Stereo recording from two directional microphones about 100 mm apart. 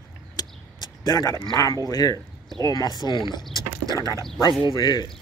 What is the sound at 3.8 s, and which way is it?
Speech, 35° right (ahead or behind).